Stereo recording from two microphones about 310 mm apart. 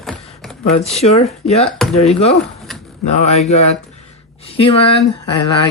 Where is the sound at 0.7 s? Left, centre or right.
Centre.